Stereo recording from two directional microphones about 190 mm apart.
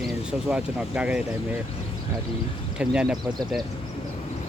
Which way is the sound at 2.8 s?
5° right (ahead or behind).